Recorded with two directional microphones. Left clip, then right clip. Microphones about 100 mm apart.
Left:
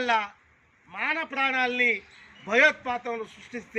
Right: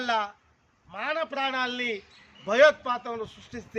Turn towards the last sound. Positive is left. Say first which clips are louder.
# left 3 dB
turn(degrees=-20)  # may be behind; listen again after turning